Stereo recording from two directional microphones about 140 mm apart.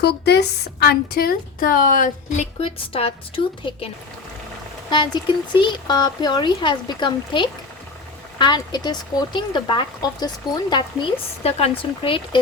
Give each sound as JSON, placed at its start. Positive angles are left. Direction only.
{"t": 0.9, "sound": "a woman's voice", "side_deg": 90}
{"t": 2.6, "sound": "a woman's voice", "side_deg": 40}
{"t": 4.9, "sound": "speech", "side_deg": 35}